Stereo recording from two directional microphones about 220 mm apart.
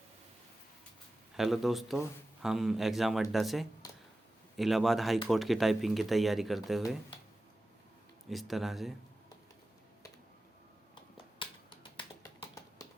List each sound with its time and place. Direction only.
1.4 s speech: centre (ahead or behind)
8.3 s speech: centre (ahead or behind)
11.3 s finger snapping: 20° left (ahead or behind)